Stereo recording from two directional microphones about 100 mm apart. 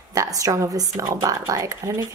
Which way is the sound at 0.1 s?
35° right (ahead or behind).